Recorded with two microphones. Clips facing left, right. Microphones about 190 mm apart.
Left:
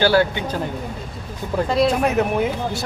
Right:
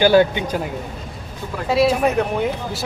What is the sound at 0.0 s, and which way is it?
Speech, 20° right (ahead or behind).